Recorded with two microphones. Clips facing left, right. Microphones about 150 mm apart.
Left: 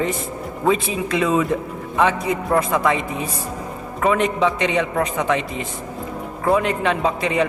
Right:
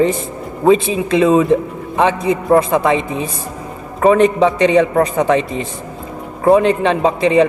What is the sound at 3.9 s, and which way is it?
A man's voice, 35° right (ahead or behind).